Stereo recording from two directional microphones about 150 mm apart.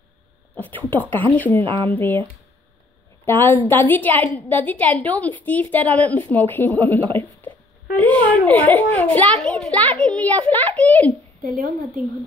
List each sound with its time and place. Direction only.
0.6 s a sound: 10° left (ahead or behind)
1.3 s a woman's voice: 10° left (ahead or behind)
1.6 s speech: 35° right (ahead or behind)
1.9 s a woman's voice: 15° left (ahead or behind)
3.3 s a woman's voice: 10° left (ahead or behind)
11.4 s a woman's voice: 70° right (ahead or behind)